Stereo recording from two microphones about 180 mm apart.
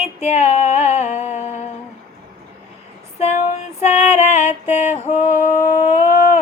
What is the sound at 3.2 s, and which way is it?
Female singing, 40° left (ahead or behind).